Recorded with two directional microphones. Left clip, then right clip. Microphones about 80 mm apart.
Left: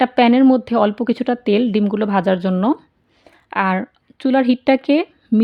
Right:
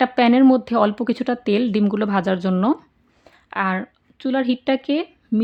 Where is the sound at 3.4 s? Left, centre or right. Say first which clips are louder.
Left 4 dB; left.